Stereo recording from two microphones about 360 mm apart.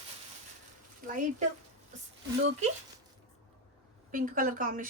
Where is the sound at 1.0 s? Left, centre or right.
Right.